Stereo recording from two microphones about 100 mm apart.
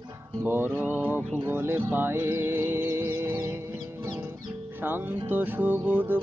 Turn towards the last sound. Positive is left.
turn(degrees=-20)  # may be behind; listen again after turning